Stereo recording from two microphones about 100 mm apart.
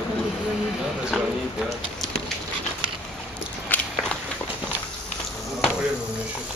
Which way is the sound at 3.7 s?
15° left (ahead or behind).